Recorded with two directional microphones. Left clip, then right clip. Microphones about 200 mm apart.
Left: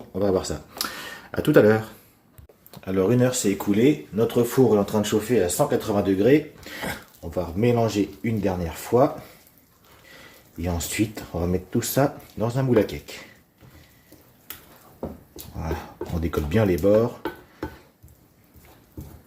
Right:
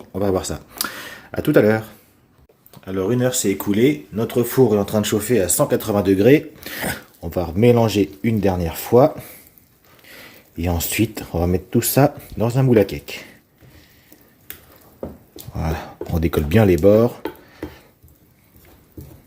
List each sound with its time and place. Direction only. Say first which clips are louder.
0.1 s speech: right 2 dB; 35° right (ahead or behind); by 1.9 s 20° right (ahead or behind)
2.7 s speech: even; centre (ahead or behind)
3.7 s speech: right 2 dB; 40° right (ahead or behind)
10.6 s speech: right 5 dB; 50° right (ahead or behind)
16.1 s speech: right 6 dB; 55° right (ahead or behind)